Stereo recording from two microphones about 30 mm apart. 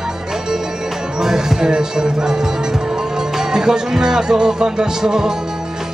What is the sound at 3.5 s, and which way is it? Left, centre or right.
Music, right.